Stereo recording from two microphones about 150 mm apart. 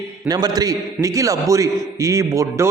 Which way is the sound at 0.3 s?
25° right (ahead or behind).